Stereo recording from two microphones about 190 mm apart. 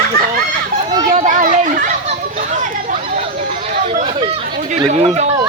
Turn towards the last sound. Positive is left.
turn(degrees=-35)  # may be behind; listen again after turning